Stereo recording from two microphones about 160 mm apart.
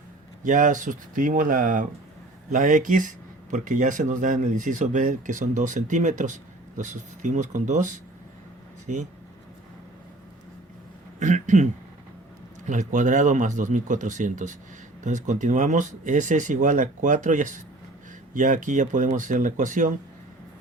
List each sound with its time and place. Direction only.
0.4 s speech: 50° right (ahead or behind)
11.2 s speech: 50° right (ahead or behind)